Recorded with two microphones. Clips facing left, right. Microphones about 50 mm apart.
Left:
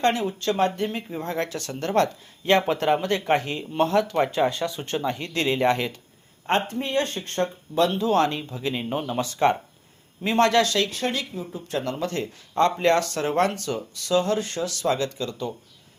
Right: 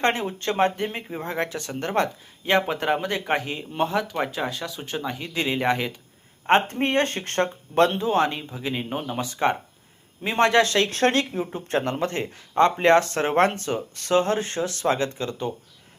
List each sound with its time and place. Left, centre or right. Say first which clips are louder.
0.0 s speech: left 1 dB; right; by 6.0 s centre
6.5 s speech: right 4 dB; right
7.9 s speech: left 1 dB; right; by 9.2 s centre
9.2 s speech: left 2 dB; centre
10.8 s speech: right 6 dB; right
11.7 s speech: right 2 dB; right